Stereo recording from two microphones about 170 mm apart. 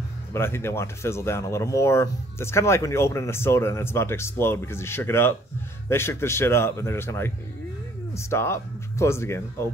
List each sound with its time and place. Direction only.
0.3 s speech: 15° left (ahead or behind)